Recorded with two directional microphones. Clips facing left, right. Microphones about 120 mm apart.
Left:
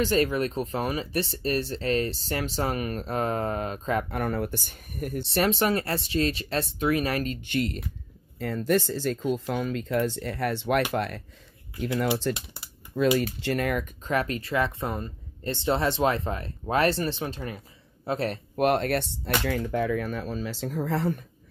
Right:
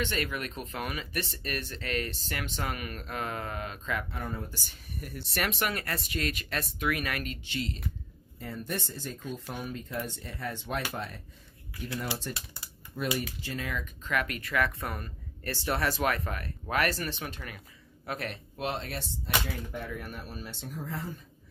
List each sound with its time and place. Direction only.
0.0 s speech: 35° left (ahead or behind)
4.1 s speech: 75° left (ahead or behind); by 5.2 s 50° left (ahead or behind)
5.2 s speech: 30° left (ahead or behind)
7.4 s speech: 55° left (ahead or behind)
8.4 s speech: 90° left
12.2 s speech: 90° left
13.4 s speech: 70° left (ahead or behind)
14.0 s speech: 30° left (ahead or behind)
18.6 s speech: 65° left (ahead or behind)